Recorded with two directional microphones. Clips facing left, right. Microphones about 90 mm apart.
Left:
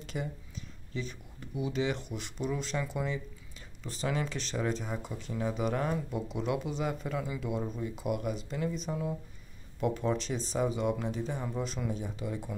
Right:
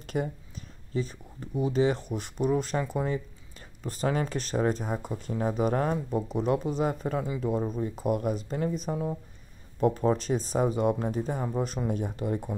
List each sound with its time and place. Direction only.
0.0 s speech: 50° right (ahead or behind)